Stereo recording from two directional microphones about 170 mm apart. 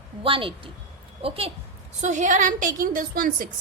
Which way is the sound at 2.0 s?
45° right (ahead or behind).